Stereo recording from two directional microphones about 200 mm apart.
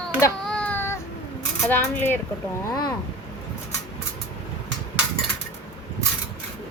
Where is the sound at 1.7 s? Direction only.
10° left (ahead or behind).